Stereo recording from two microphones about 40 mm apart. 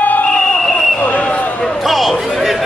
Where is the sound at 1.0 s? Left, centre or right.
Left.